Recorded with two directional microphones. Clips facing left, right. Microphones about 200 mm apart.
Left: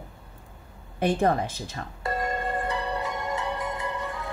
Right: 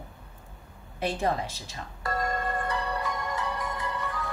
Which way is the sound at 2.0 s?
25° left (ahead or behind).